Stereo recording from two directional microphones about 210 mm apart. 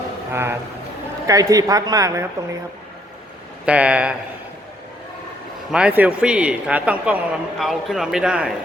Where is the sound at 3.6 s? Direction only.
5° right (ahead or behind).